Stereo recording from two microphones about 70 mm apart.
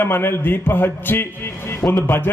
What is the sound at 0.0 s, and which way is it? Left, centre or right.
A man's voice, left.